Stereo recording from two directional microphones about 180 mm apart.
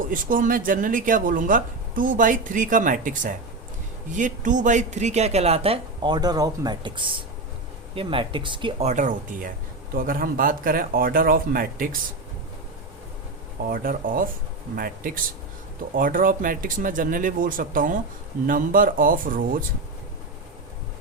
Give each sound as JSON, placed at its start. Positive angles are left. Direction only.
{"t": 0.1, "sound": "speech", "side_deg": -50}
{"t": 8.9, "sound": "speech", "side_deg": -45}
{"t": 13.7, "sound": "speech", "side_deg": -50}